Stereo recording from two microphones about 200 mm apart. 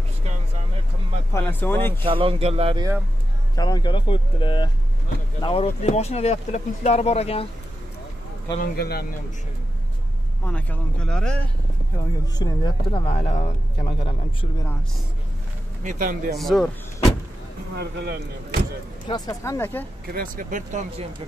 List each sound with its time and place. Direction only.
1.3 s speech: 10° left (ahead or behind)
2.0 s speech: 25° right (ahead or behind)
3.5 s speech: 20° left (ahead or behind)
8.5 s a man's voice: 50° left (ahead or behind)
10.4 s speech: 5° left (ahead or behind)
12.4 s speech: 20° left (ahead or behind)
15.8 s speech: 40° right (ahead or behind)
16.3 s speech: centre (ahead or behind)
17.7 s speech: 55° right (ahead or behind)
19.0 s speech: 20° left (ahead or behind)
20.1 s speech: 45° right (ahead or behind)